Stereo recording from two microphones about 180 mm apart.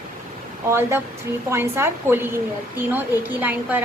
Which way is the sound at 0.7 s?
10° right (ahead or behind).